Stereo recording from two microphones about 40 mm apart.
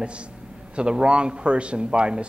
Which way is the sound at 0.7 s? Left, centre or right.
Right.